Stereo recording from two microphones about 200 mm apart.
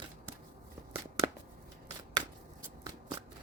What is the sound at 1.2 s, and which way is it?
Shuffling cards, 20° right (ahead or behind).